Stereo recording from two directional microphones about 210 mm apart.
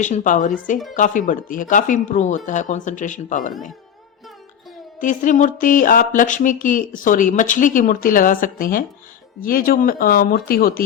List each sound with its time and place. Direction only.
0.0 s speech: 35° left (ahead or behind)
4.9 s speech: 40° left (ahead or behind)